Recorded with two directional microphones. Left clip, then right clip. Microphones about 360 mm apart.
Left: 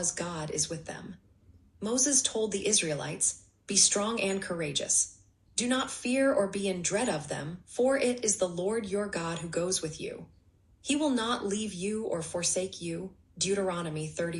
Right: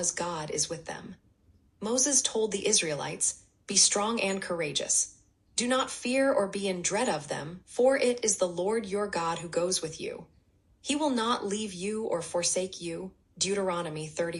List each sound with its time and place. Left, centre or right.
0.0 s speech: centre